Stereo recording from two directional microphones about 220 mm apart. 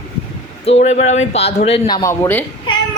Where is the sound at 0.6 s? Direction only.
30° left (ahead or behind).